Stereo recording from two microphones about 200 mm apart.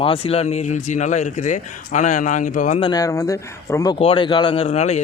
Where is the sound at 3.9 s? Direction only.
25° left (ahead or behind).